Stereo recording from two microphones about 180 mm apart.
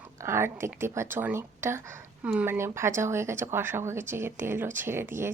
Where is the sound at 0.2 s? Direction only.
15° right (ahead or behind).